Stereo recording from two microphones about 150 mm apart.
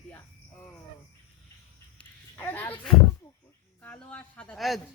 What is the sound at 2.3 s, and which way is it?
Speech, 15° left (ahead or behind).